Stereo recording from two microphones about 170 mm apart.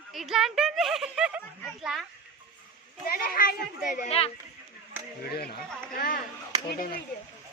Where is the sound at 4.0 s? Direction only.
35° left (ahead or behind).